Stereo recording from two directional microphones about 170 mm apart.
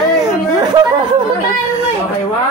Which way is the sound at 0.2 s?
20° right (ahead or behind).